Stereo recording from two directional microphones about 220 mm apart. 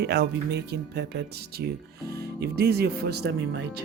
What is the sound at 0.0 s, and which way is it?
Speech, 50° right (ahead or behind).